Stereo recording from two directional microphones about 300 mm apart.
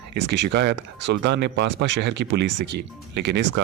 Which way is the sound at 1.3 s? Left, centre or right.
Right.